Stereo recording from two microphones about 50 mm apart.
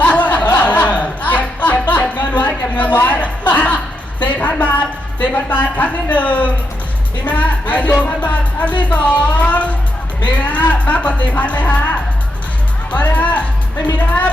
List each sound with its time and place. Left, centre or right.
0.0 s music: left
2.7 s a sound: left
3.1 s music: left
4.4 s a sound: left
5.5 s music: left
12.9 s speech: left